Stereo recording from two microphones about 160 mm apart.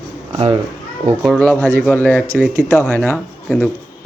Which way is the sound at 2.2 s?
15° right (ahead or behind).